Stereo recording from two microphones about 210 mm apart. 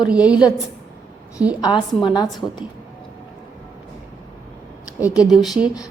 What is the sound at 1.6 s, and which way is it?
Speech, 20° left (ahead or behind).